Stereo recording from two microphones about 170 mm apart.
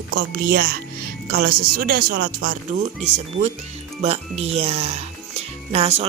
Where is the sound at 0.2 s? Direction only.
60° right (ahead or behind).